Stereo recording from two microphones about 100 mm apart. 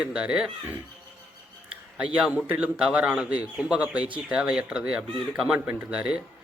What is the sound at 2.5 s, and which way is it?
Speech, 15° right (ahead or behind).